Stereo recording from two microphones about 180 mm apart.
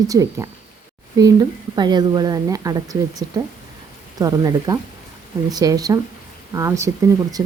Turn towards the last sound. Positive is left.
turn(degrees=-15)  # may be behind; listen again after turning